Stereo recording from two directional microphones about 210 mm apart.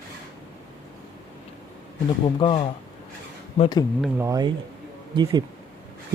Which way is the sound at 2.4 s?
25° left (ahead or behind).